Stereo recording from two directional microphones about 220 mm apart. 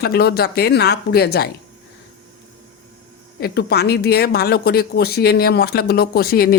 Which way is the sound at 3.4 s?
45° left (ahead or behind).